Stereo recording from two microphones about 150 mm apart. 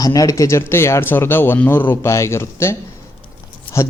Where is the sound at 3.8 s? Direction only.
20° left (ahead or behind).